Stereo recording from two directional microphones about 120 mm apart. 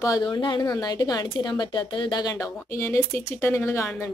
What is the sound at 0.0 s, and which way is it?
Speech, 35° left (ahead or behind).